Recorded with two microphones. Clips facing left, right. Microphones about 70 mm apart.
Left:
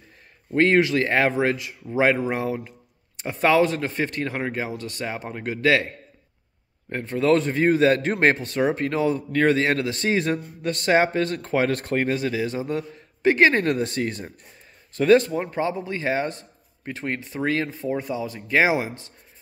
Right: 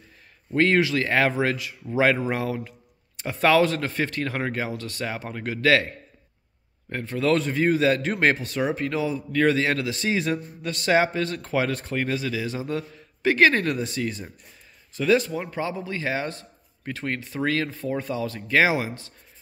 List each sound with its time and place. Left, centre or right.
0.6 s a man's voice: left
6.9 s a man's voice: left
13.7 s a man's voice: left
15.3 s a man's voice: left